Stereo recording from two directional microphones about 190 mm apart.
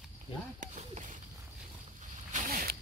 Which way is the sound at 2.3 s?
45° right (ahead or behind).